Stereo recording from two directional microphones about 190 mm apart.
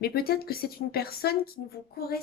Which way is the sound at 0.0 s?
55° left (ahead or behind).